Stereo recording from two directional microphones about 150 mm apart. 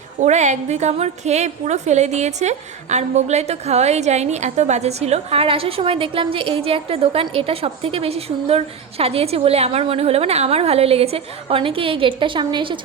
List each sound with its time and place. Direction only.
0.2 s a woman's voice: 50° right (ahead or behind); by 12.8 s 30° right (ahead or behind)